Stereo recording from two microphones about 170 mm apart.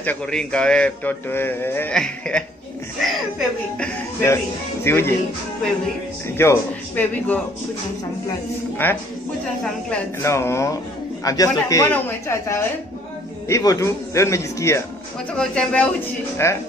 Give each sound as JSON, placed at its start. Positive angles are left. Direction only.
{"t": 0.0, "sound": "a man's voice", "side_deg": 5}
{"t": 6.2, "sound": "a man's voice", "side_deg": 15}
{"t": 8.8, "sound": "a man's voice", "side_deg": 10}
{"t": 15.3, "sound": "speech", "side_deg": 5}
{"t": 16.4, "sound": "a man's voice", "side_deg": 15}